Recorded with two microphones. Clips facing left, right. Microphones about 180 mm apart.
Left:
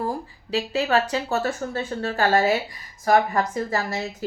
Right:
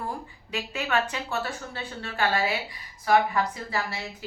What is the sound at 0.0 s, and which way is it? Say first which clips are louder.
A woman's voice: left 6 dB; 35° left (ahead or behind).